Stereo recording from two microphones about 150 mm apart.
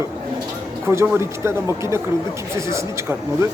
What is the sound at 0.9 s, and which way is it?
Speech, 20° right (ahead or behind).